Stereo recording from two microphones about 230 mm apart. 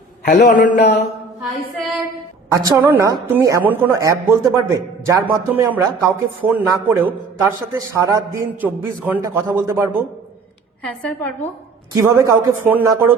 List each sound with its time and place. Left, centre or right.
0.3 s a man's voice: left
2.5 s a woman's voice: centre
10.8 s a woman's voice: centre
11.9 s a woman's voice: centre